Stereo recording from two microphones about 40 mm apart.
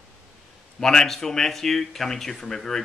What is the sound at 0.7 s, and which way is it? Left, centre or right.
Speech, centre.